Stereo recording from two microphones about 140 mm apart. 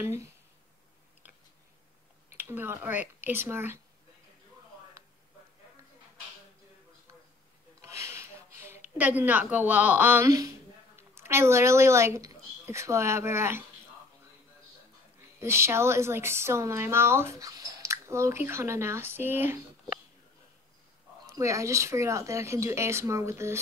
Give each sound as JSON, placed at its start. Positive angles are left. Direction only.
{"t": 2.3, "sound": "speech", "side_deg": -15}
{"t": 5.0, "sound": "a sound", "side_deg": -20}
{"t": 7.8, "sound": "a sound", "side_deg": -20}
{"t": 11.0, "sound": "speech", "side_deg": -20}
{"t": 15.4, "sound": "a woman's voice", "side_deg": -20}
{"t": 21.3, "sound": "a woman's voice", "side_deg": -20}